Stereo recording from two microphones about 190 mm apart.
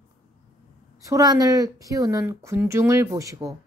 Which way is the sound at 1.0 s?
20° right (ahead or behind).